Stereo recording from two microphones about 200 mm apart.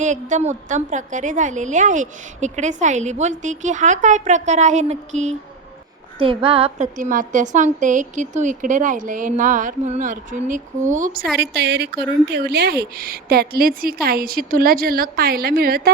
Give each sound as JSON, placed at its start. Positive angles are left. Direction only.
{"t": 0.0, "sound": "a woman's voice", "side_deg": -40}
{"t": 11.3, "sound": "a woman's voice", "side_deg": -55}